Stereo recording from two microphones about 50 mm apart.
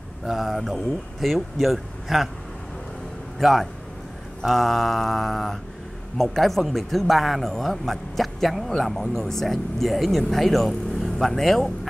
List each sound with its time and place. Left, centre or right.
0.3 s a man's voice: centre
3.3 s a man's voice: centre